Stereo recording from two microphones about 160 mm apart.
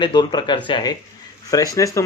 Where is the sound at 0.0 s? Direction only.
25° left (ahead or behind).